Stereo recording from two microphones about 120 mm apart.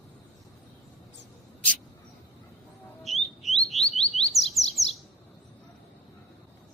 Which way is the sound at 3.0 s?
Centre (ahead or behind).